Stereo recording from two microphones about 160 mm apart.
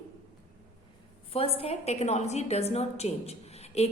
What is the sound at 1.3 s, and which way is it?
A woman's voice, 40° left (ahead or behind).